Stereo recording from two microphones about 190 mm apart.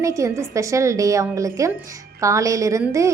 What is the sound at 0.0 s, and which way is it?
A woman's voice, 15° right (ahead or behind).